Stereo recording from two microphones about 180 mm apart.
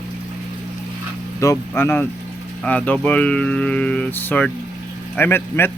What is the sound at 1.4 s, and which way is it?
A man's voice, 15° left (ahead or behind).